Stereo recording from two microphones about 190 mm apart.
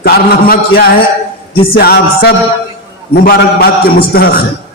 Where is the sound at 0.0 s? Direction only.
55° left (ahead or behind).